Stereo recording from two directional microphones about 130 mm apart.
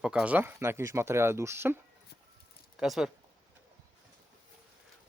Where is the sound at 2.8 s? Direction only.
5° right (ahead or behind).